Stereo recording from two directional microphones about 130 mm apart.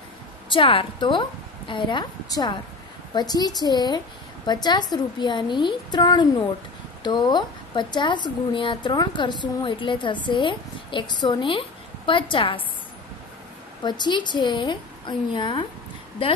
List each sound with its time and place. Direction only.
0.5 s a woman's voice: 45° left (ahead or behind)
13.8 s a woman's voice: 35° left (ahead or behind)